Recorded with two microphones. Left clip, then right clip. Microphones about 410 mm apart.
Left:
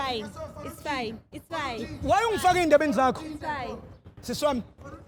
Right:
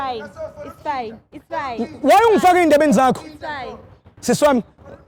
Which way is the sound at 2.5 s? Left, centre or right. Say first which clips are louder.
Right 8 dB; right.